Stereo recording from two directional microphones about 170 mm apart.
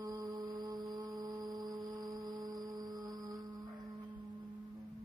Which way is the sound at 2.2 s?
25° right (ahead or behind).